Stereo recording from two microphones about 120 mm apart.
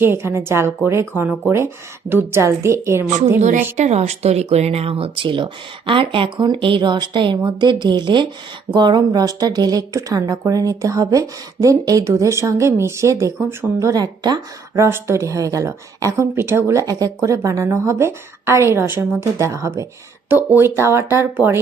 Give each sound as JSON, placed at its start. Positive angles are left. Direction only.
{"t": 0.0, "sound": "speech", "side_deg": -20}
{"t": 3.4, "sound": "speech", "side_deg": -85}
{"t": 14.8, "sound": "speech", "side_deg": -20}